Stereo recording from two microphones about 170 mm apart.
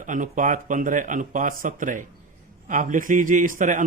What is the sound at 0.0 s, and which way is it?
A man's voice, 50° right (ahead or behind).